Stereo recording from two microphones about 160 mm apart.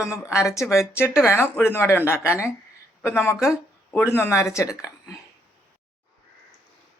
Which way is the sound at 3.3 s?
5° right (ahead or behind).